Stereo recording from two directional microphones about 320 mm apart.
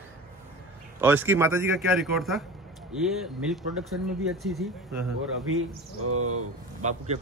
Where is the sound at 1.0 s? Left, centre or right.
Centre.